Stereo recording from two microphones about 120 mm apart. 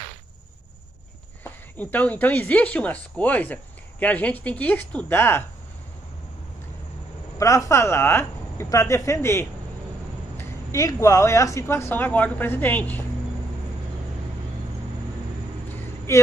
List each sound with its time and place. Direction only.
1.4 s speech: 15° left (ahead or behind)
7.3 s speech: 25° left (ahead or behind)